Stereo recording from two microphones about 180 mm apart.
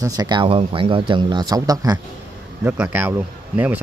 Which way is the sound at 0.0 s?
20° right (ahead or behind).